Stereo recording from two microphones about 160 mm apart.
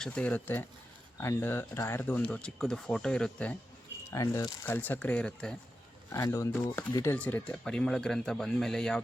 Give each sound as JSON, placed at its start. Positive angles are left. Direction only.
{"t": 0.0, "sound": "speech", "side_deg": 5}
{"t": 4.1, "sound": "speech", "side_deg": 20}
{"t": 6.1, "sound": "speech", "side_deg": 20}